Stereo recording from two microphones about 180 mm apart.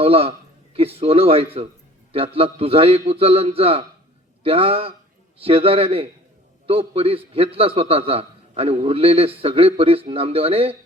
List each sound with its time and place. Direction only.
0.0 s a man's voice: 30° right (ahead or behind)